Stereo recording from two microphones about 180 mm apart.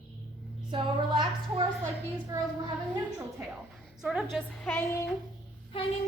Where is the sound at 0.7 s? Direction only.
25° right (ahead or behind).